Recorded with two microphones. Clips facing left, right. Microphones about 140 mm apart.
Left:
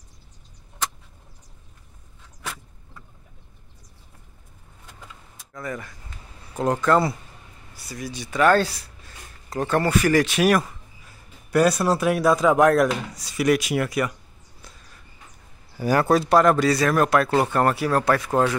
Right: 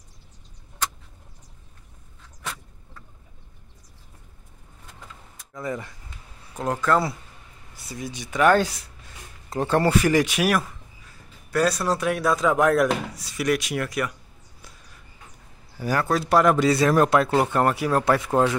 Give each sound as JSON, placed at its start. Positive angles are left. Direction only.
{"t": 5.5, "sound": "speech", "side_deg": -20}
{"t": 6.6, "sound": "speech", "side_deg": 0}
{"t": 7.7, "sound": "speech", "side_deg": -20}
{"t": 11.5, "sound": "speech", "side_deg": 10}
{"t": 15.8, "sound": "speech", "side_deg": 5}
{"t": 16.5, "sound": "speech", "side_deg": -20}
{"t": 17.3, "sound": "speech", "side_deg": -10}